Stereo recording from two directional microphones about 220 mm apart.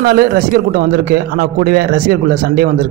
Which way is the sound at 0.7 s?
45° right (ahead or behind).